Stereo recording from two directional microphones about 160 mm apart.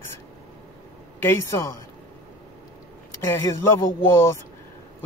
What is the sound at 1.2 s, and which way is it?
Speech, 15° left (ahead or behind).